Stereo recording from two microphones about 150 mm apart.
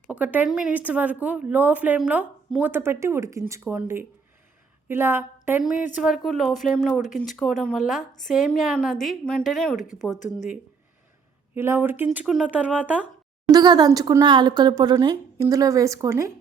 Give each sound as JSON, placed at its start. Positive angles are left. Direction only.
{"t": 0.1, "sound": "a woman's voice", "side_deg": -10}
{"t": 9.7, "sound": "speech", "side_deg": 55}
{"t": 11.5, "sound": "speech", "side_deg": -15}
{"t": 13.5, "sound": "speech", "side_deg": -25}